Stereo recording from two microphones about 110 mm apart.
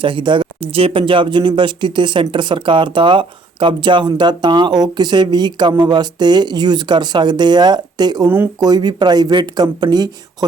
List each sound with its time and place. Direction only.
0.0 s speech: 45° right (ahead or behind)